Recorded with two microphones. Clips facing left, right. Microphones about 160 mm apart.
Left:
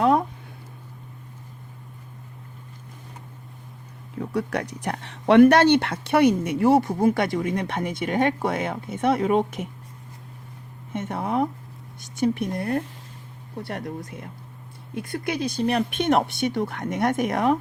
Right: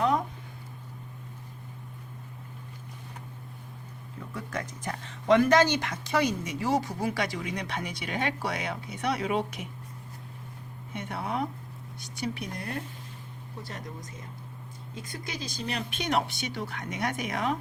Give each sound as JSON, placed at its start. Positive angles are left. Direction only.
{"t": 4.4, "sound": "speech", "side_deg": 75}
{"t": 10.9, "sound": "speech", "side_deg": 45}
{"t": 13.6, "sound": "speech", "side_deg": 60}